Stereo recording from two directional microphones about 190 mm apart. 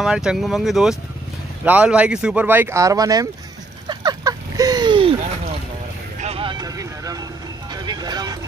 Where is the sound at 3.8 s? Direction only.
20° right (ahead or behind).